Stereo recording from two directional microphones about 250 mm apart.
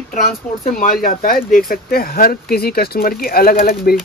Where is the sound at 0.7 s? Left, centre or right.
Left.